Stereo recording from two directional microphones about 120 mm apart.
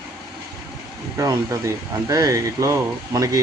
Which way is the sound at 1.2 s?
25° right (ahead or behind).